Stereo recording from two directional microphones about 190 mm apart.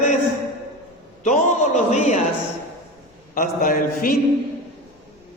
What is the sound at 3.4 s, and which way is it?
Speech, 45° left (ahead or behind).